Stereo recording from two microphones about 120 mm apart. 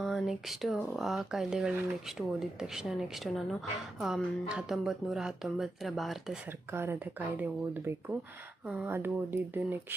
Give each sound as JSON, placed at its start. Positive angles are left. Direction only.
{"t": 0.0, "sound": "speech", "side_deg": 0}
{"t": 6.7, "sound": "speech", "side_deg": -20}